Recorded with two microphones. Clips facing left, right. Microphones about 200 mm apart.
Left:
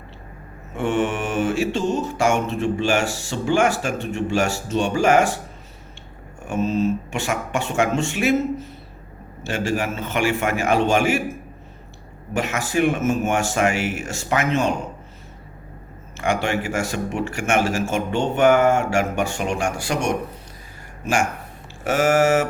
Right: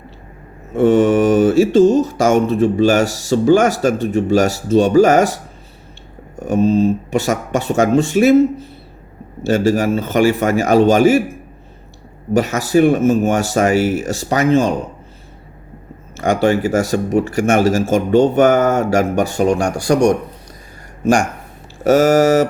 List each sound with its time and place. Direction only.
0.8 s mantra: 35° right (ahead or behind)
12.3 s mantra: 35° right (ahead or behind)
16.1 s mantra: 35° right (ahead or behind)
21.8 s mantra: 40° right (ahead or behind)